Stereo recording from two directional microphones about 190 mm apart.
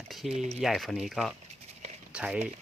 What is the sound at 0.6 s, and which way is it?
Speech, centre (ahead or behind).